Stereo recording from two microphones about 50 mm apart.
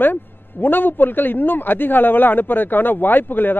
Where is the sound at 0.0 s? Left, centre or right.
Left.